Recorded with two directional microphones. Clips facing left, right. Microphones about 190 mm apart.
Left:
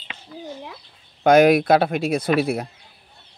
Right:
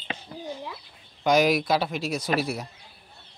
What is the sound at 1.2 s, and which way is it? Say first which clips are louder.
Speech: left 7 dB; 55° left (ahead or behind).